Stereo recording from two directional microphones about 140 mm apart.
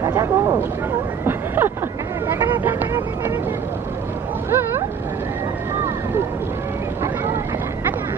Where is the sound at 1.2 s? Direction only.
15° right (ahead or behind).